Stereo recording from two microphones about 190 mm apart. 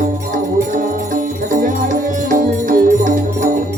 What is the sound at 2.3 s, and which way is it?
Music, 45° right (ahead or behind).